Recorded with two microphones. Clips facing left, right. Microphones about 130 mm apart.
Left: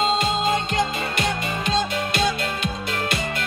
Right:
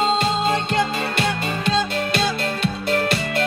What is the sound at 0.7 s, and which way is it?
Music, 30° right (ahead or behind).